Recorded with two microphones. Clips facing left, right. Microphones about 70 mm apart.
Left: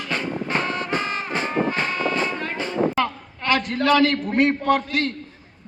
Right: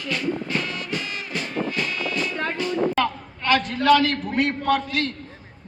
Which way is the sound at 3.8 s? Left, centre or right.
Left.